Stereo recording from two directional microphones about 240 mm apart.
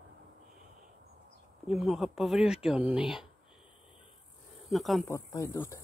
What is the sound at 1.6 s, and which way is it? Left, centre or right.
Speech, centre.